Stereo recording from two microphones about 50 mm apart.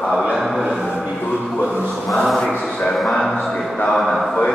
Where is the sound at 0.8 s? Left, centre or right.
Centre.